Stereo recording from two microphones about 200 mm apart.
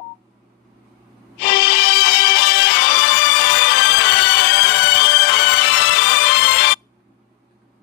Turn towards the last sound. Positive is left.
turn(degrees=55)  # may be behind; listen again after turning